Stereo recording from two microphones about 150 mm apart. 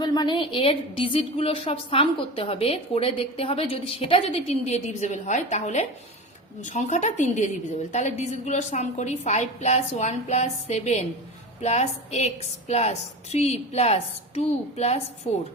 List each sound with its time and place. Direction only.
0.0 s a woman's voice: 30° left (ahead or behind); by 15.0 s 45° left (ahead or behind)